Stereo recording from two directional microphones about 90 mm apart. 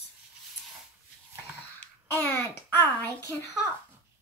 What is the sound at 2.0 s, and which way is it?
A child's voice, 25° left (ahead or behind).